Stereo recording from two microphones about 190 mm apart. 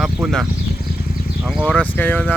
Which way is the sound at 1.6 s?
10° left (ahead or behind).